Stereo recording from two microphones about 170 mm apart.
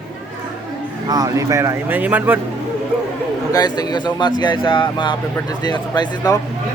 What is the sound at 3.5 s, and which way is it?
Speech, 25° left (ahead or behind).